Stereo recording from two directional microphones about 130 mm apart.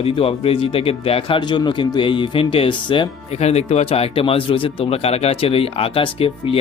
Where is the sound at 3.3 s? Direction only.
55° left (ahead or behind).